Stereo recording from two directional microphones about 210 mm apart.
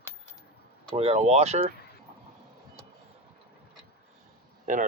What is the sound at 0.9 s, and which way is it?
Speech, 30° right (ahead or behind).